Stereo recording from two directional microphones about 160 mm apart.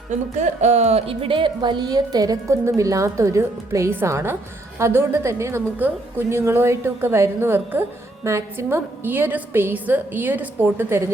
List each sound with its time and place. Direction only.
0.1 s a woman's voice: 45° right (ahead or behind); by 11.1 s 15° right (ahead or behind)